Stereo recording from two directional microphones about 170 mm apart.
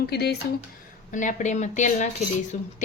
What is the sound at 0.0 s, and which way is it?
Speech, 70° left (ahead or behind).